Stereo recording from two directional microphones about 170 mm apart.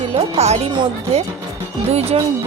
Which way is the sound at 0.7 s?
30° right (ahead or behind).